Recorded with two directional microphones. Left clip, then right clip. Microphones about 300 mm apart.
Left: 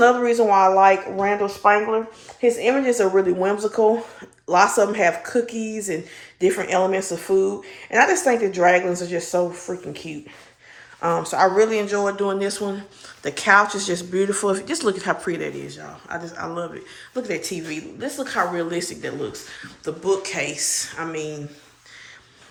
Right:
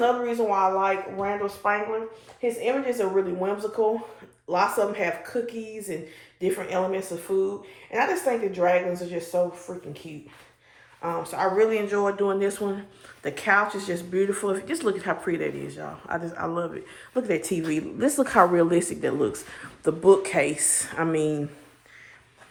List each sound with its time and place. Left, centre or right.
0.0 s speech: left
9.7 s speech: left
11.0 s speech: left
11.5 s speech: centre